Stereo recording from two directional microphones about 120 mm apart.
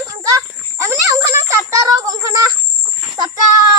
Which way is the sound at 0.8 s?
25° right (ahead or behind).